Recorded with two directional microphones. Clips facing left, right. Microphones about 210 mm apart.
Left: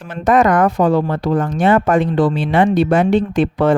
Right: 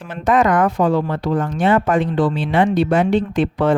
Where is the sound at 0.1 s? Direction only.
45° left (ahead or behind).